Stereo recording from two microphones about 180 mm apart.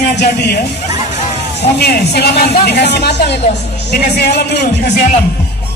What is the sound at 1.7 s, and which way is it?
Speech, 65° left (ahead or behind).